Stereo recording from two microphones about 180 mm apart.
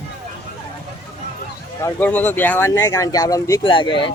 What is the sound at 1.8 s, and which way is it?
Speech, 10° left (ahead or behind).